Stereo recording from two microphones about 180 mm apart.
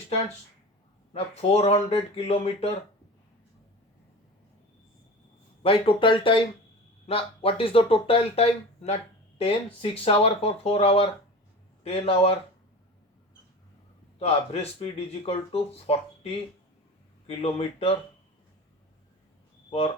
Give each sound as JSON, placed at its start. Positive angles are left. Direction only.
{"t": 1.4, "sound": "speech", "side_deg": 35}
{"t": 5.6, "sound": "speech", "side_deg": 30}
{"t": 14.2, "sound": "speech", "side_deg": 35}